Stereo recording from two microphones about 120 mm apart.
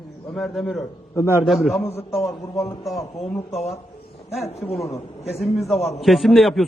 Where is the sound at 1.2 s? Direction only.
20° left (ahead or behind).